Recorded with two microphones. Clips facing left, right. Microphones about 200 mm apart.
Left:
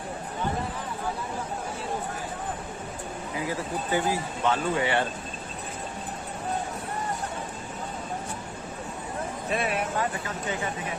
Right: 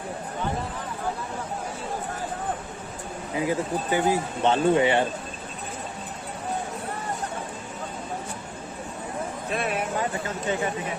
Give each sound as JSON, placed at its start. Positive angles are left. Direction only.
{"t": 3.3, "sound": "speech", "side_deg": -20}
{"t": 9.5, "sound": "speech", "side_deg": 0}